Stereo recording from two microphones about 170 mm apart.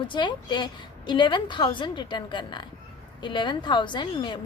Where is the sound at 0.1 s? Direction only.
25° left (ahead or behind).